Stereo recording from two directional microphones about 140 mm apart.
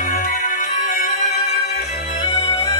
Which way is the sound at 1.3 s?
50° left (ahead or behind).